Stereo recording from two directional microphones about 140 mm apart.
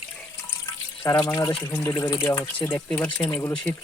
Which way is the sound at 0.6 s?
20° left (ahead or behind).